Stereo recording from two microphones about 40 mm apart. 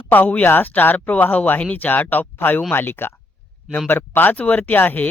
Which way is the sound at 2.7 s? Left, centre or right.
Left.